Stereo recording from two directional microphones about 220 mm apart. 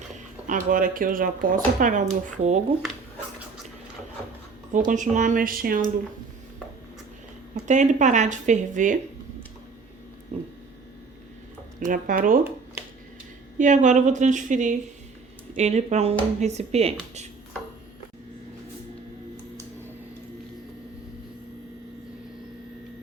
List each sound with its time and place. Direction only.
0.4 s speech: 35° right (ahead or behind)
4.9 s speech: 35° right (ahead or behind)
7.7 s speech: 35° right (ahead or behind)
11.8 s speech: 35° right (ahead or behind)
13.6 s speech: 35° right (ahead or behind)